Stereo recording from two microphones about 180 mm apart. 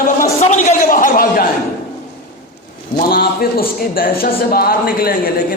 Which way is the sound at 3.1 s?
55° left (ahead or behind).